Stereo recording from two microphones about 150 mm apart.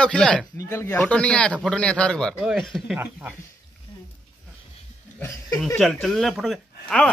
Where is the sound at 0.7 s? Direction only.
20° left (ahead or behind); by 3.0 s centre (ahead or behind).